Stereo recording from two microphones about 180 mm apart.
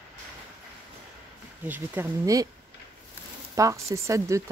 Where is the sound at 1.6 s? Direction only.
10° right (ahead or behind).